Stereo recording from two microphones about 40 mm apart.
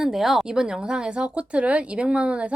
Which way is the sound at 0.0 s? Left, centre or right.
Centre.